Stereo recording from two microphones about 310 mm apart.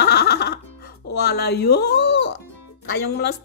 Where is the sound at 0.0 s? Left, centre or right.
Left.